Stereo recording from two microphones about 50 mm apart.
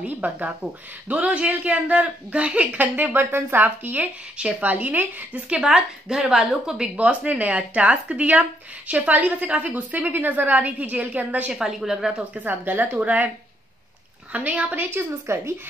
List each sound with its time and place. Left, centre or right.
0.0 s speech: right
5.6 s a woman's voice: centre
6.8 s speech: right
11.5 s a woman's voice: centre
12.4 s speech: right
14.3 s speech: right
15.0 s a woman's voice: right